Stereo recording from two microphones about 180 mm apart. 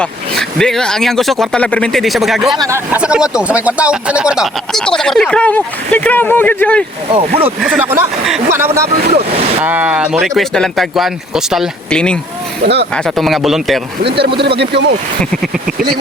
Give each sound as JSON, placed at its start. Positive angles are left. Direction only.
{"t": 0.0, "sound": "speech", "side_deg": 5}
{"t": 2.6, "sound": "speech", "side_deg": -15}
{"t": 7.1, "sound": "speech", "side_deg": -30}
{"t": 7.6, "sound": "speech", "side_deg": -5}
{"t": 12.6, "sound": "speech", "side_deg": -65}
{"t": 12.9, "sound": "speech", "side_deg": 5}
{"t": 14.6, "sound": "speech", "side_deg": -70}
{"t": 15.2, "sound": "speech", "side_deg": 0}